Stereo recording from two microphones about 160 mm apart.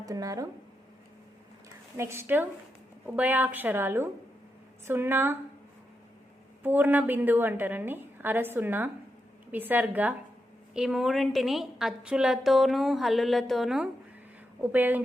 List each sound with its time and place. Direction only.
0.0 s speech: 20° right (ahead or behind)
2.0 s a woman's voice: 15° right (ahead or behind)
6.6 s a woman's voice: 10° right (ahead or behind)